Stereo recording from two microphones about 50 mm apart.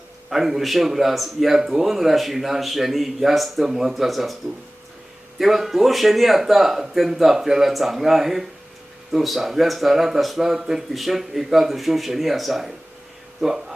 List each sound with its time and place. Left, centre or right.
0.3 s a man's voice: centre
5.4 s a man's voice: centre